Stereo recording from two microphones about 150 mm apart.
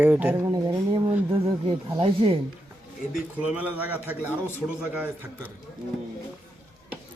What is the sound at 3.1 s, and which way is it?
Speech, 10° right (ahead or behind).